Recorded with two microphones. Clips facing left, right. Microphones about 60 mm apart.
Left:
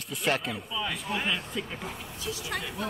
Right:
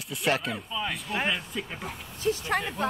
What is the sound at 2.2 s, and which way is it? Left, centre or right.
Speech, right.